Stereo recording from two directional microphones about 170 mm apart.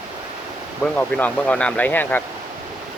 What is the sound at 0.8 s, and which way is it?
Speech, 10° left (ahead or behind).